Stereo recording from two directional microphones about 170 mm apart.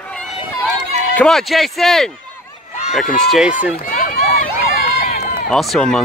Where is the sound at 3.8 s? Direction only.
55° left (ahead or behind).